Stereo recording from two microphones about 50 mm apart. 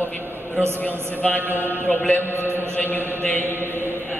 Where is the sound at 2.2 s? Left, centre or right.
Right.